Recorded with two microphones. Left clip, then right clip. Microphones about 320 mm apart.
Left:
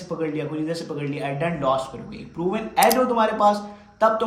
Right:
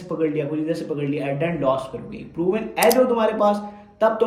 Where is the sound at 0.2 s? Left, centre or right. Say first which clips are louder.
Right 5 dB; centre.